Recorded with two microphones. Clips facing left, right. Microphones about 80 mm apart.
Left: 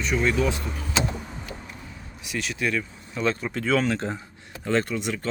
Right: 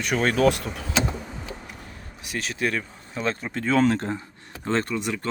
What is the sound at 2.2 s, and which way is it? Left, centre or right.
Speech, right.